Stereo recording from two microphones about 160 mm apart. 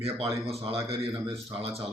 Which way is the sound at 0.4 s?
35° right (ahead or behind).